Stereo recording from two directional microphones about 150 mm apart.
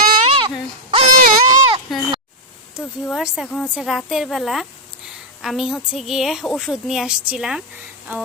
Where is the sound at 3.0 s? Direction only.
5° right (ahead or behind).